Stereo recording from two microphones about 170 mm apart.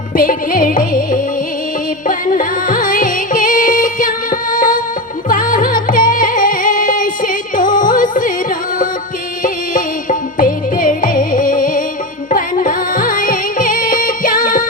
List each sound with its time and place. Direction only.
0.2 s music: 55° left (ahead or behind)
9.4 s music: 50° left (ahead or behind)